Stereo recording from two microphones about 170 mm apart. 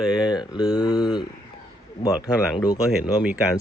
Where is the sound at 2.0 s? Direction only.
25° left (ahead or behind).